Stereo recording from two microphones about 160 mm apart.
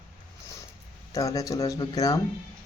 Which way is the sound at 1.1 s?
20° left (ahead or behind).